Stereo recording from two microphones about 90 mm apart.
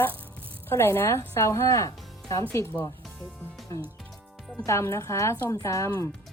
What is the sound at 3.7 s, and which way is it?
Speech, 35° left (ahead or behind).